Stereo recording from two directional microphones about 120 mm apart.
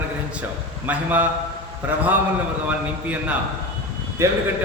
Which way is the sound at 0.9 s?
15° right (ahead or behind).